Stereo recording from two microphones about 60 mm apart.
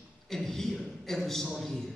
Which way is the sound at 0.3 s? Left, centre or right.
Centre.